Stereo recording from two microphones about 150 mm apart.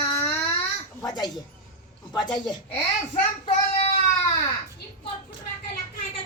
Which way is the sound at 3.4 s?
40° left (ahead or behind).